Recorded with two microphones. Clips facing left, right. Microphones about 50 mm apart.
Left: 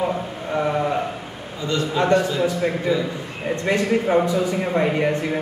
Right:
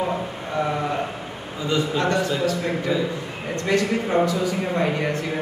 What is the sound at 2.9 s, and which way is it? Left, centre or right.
Speech, centre.